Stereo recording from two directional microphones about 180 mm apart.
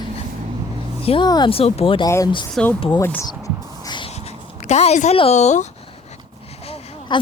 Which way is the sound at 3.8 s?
25° left (ahead or behind).